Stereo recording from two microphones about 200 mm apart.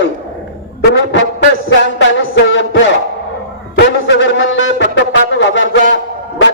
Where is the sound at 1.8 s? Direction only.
60° left (ahead or behind).